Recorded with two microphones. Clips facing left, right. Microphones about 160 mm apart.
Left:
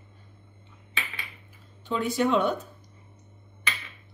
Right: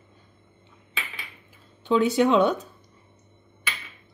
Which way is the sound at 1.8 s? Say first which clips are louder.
Right 6 dB; 80° right.